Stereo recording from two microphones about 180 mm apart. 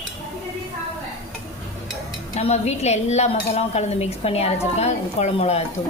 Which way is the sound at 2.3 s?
35° left (ahead or behind).